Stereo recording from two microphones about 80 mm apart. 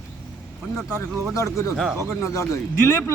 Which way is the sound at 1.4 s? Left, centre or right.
Left.